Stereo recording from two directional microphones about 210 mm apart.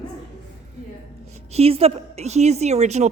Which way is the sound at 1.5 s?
30° right (ahead or behind).